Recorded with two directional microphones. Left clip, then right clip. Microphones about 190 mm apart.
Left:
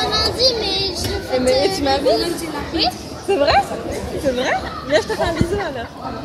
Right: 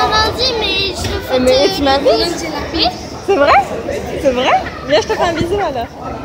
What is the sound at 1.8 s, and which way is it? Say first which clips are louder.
A child's voice: right 5 dB; 15° right (ahead or behind).